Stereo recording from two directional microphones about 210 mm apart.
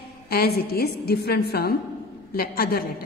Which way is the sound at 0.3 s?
45° left (ahead or behind).